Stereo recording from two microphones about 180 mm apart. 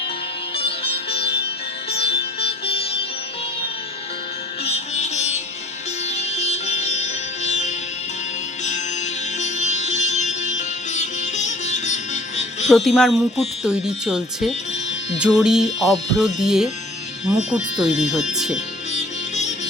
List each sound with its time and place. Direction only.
1.9 s music: 35° left (ahead or behind)
4.6 s music: 35° left (ahead or behind)
9.4 s music: 40° left (ahead or behind)
12.6 s speech: centre (ahead or behind)
18.9 s music: 40° left (ahead or behind)